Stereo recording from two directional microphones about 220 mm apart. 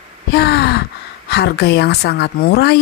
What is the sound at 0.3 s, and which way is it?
Gasp, 45° left (ahead or behind).